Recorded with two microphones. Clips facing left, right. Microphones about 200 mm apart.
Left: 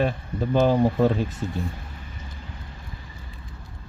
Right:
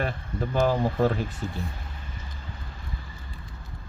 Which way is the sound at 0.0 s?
20° left (ahead or behind).